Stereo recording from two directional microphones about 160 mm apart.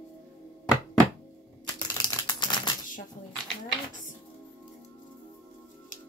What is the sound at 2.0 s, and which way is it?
Typewriter, 25° left (ahead or behind).